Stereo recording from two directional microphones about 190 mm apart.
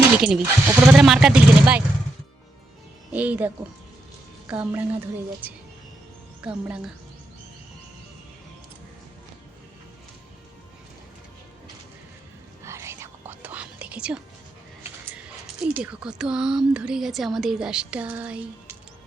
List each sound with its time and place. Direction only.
0.2 s a woman's voice: 10° right (ahead or behind)
3.1 s a woman's voice: 10° right (ahead or behind)
12.6 s whispering: 15° right (ahead or behind)
15.6 s a woman's voice: 5° right (ahead or behind)